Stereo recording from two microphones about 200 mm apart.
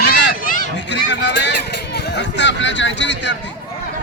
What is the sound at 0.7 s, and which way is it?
Speech, 60° left (ahead or behind).